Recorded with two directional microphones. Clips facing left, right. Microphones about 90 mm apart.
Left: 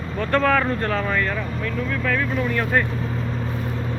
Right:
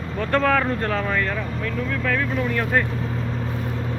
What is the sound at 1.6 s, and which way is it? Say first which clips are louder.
Speech: even; 60° right (ahead or behind).